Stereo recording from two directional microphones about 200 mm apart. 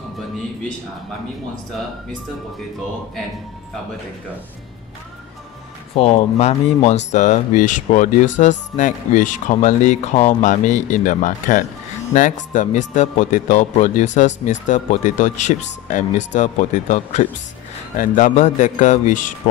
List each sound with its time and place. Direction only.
5.9 s speech: 30° left (ahead or behind)